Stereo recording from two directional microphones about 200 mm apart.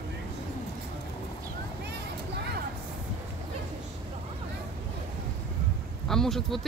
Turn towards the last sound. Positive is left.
turn(degrees=0)  # may be behind; listen again after turning